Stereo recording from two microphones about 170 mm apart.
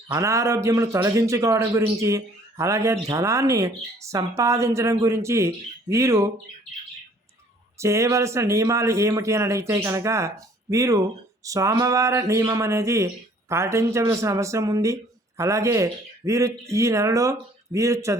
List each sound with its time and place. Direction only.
0.1 s a man's voice: 20° right (ahead or behind)
7.8 s a man's voice: 15° right (ahead or behind)